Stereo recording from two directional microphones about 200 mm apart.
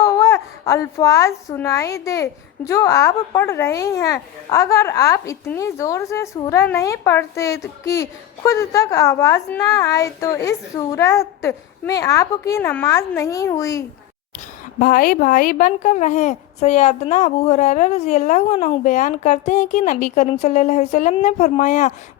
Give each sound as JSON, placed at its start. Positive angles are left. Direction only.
{"t": 0.0, "sound": "a child's voice", "side_deg": 15}
{"t": 14.8, "sound": "a woman's voice", "side_deg": 45}